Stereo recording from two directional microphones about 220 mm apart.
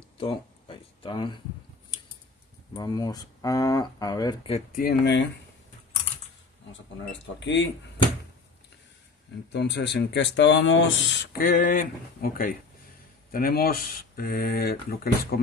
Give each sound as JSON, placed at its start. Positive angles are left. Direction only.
{"t": 0.2, "sound": "a sound", "side_deg": 25}
{"t": 2.7, "sound": "speech", "side_deg": 20}
{"t": 4.8, "sound": "speech", "side_deg": 50}
{"t": 7.1, "sound": "speech", "side_deg": 55}
{"t": 9.5, "sound": "speech", "side_deg": 50}
{"t": 11.3, "sound": "speech", "side_deg": 40}